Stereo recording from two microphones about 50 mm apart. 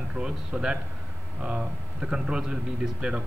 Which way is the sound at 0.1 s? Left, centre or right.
Centre.